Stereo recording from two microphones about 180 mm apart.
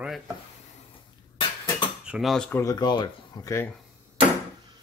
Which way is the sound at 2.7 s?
25° left (ahead or behind).